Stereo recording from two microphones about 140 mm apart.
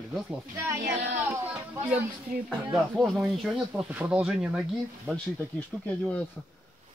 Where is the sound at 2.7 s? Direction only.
Centre (ahead or behind).